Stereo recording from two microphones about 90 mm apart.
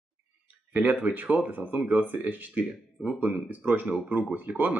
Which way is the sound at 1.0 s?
20° right (ahead or behind).